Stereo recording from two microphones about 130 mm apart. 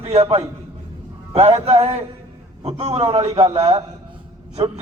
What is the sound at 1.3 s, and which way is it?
A man's voice, 50° right (ahead or behind).